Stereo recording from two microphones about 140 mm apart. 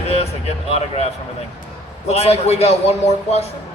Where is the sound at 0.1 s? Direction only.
50° left (ahead or behind).